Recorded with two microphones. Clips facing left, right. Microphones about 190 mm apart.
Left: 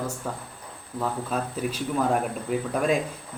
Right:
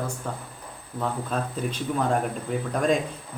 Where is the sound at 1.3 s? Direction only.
5° left (ahead or behind).